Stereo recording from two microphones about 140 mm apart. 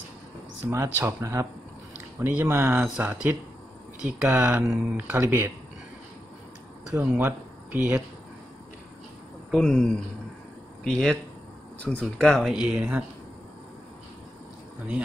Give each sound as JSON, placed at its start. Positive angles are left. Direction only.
{"t": 0.7, "sound": "speech", "side_deg": -15}
{"t": 4.2, "sound": "speech", "side_deg": -10}
{"t": 6.9, "sound": "speech", "side_deg": -15}
{"t": 9.5, "sound": "speech", "side_deg": 5}